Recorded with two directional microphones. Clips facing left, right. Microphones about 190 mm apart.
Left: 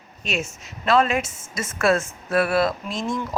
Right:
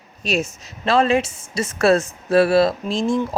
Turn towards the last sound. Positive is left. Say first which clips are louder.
# right 5 dB
turn(degrees=-30)  # may be behind; listen again after turning